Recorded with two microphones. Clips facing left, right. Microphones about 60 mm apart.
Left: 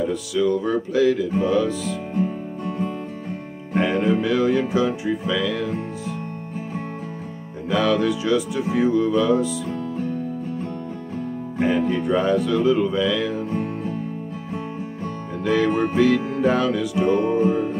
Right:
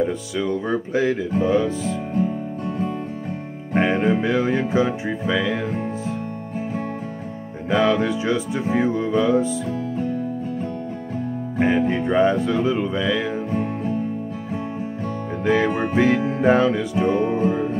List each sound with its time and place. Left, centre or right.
0.0 s music: right
3.7 s music: right
7.7 s music: right
11.6 s music: right
15.4 s music: right